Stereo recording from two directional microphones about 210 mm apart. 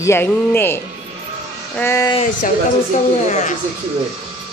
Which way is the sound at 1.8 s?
15° left (ahead or behind).